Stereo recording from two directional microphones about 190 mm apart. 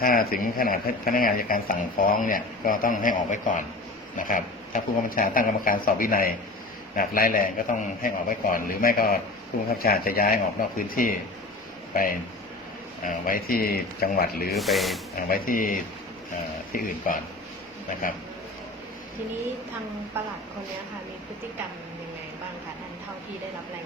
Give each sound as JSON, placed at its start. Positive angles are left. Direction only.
{"t": 0.0, "sound": "speech", "side_deg": 50}
{"t": 13.1, "sound": "speech", "side_deg": 50}
{"t": 14.5, "sound": "speech", "side_deg": 0}
{"t": 15.1, "sound": "speech", "side_deg": 50}